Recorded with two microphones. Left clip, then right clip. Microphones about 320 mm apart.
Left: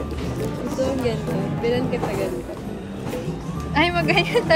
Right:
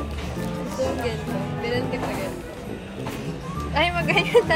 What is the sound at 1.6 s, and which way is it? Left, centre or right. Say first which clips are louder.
Music: left 4 dB; centre.